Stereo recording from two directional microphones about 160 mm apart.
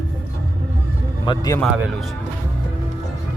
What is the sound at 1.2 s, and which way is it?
Speech, 25° left (ahead or behind).